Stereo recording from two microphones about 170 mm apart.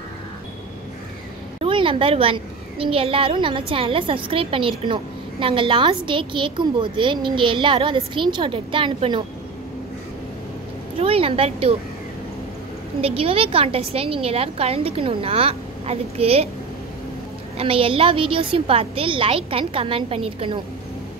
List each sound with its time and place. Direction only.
1.6 s a child's voice: 30° right (ahead or behind)
11.0 s a woman's voice: 35° right (ahead or behind)
13.0 s a child's voice: 35° right (ahead or behind)
17.6 s a child's voice: 35° right (ahead or behind)